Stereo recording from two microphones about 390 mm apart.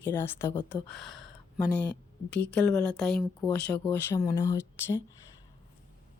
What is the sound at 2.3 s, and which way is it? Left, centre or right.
Speech, left.